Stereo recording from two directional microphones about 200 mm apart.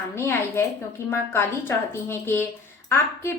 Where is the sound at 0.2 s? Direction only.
10° left (ahead or behind).